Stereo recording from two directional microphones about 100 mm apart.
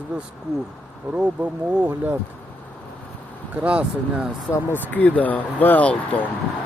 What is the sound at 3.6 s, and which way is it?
Speech, 10° right (ahead or behind).